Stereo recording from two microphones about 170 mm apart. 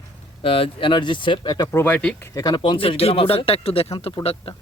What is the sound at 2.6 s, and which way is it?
Speech, 30° left (ahead or behind).